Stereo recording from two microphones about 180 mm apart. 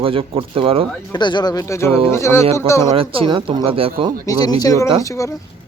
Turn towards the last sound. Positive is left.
turn(degrees=15)  # may be behind; listen again after turning